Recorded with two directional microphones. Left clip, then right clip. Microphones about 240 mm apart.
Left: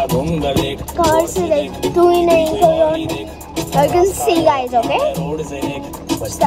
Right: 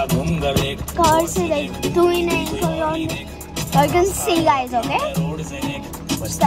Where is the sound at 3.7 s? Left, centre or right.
Right.